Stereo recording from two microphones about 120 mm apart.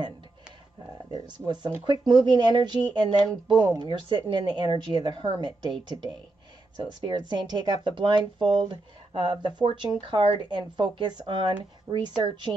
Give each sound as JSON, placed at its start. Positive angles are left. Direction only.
{"t": 1.1, "sound": "speech", "side_deg": -40}
{"t": 6.8, "sound": "speech", "side_deg": -35}
{"t": 11.9, "sound": "speech", "side_deg": -20}
{"t": 12.2, "sound": "speech", "side_deg": -40}